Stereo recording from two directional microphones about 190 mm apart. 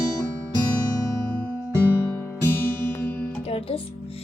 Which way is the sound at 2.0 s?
10° left (ahead or behind).